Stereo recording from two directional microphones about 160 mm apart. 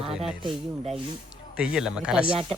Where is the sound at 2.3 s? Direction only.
35° right (ahead or behind).